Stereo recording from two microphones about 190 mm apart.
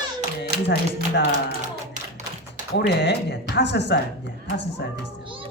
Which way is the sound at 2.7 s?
65° left (ahead or behind).